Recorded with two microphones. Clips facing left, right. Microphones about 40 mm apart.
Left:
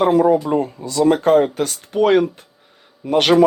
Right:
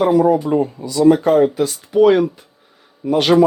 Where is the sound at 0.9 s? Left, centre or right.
Left.